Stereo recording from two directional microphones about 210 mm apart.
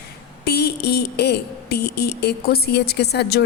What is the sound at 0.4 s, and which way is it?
A woman's voice, 50° left (ahead or behind).